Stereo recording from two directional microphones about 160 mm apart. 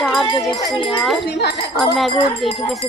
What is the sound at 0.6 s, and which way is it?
Speech, 25° left (ahead or behind).